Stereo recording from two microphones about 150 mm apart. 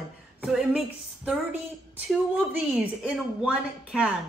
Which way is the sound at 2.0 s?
5° right (ahead or behind).